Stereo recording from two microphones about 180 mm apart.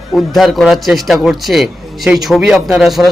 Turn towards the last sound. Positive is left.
turn(degrees=0)  # may be behind; listen again after turning